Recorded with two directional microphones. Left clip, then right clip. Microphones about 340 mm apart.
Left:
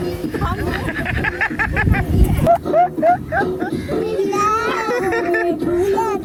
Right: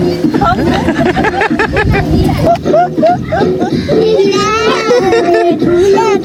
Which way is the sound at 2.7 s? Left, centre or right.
Centre.